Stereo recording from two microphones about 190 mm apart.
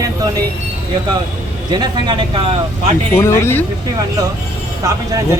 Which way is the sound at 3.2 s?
15° left (ahead or behind).